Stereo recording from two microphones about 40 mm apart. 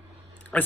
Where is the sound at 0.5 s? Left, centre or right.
Left.